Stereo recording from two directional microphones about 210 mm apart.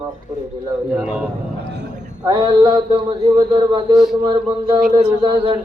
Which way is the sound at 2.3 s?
20° right (ahead or behind).